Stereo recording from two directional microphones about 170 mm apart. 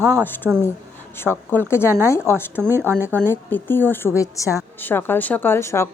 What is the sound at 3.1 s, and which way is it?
A woman's voice, 10° left (ahead or behind).